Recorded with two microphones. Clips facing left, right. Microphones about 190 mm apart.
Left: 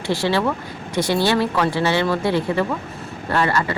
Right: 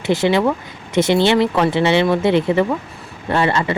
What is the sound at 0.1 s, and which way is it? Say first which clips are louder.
Speech: right 4 dB; 20° right (ahead or behind).